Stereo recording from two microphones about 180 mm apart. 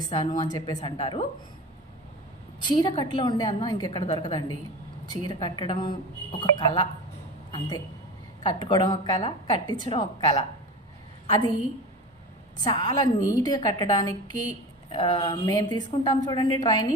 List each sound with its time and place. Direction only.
0.1 s a woman's voice: 25° left (ahead or behind)
2.6 s a woman's voice: 25° left (ahead or behind)
8.4 s a woman's voice: 25° left (ahead or behind)
12.6 s a woman's voice: 25° left (ahead or behind)